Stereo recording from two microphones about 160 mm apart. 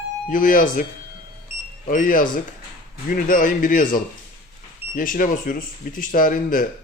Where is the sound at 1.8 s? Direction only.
60° left (ahead or behind).